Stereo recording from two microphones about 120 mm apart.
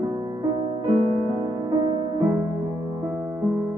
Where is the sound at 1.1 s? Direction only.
35° right (ahead or behind).